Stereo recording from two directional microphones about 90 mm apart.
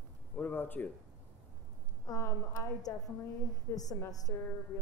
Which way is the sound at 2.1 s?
40° left (ahead or behind).